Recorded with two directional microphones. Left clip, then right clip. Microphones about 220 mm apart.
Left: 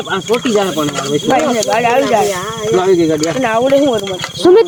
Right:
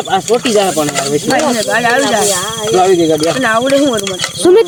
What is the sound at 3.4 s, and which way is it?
Speech, 30° right (ahead or behind).